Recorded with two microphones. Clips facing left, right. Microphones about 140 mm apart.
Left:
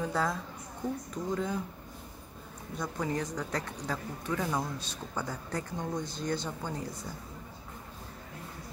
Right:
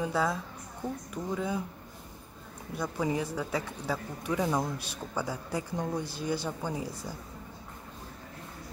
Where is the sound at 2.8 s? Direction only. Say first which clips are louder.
Right 3 dB; 10° right (ahead or behind).